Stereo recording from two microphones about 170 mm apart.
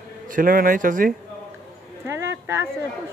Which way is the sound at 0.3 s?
55° right (ahead or behind).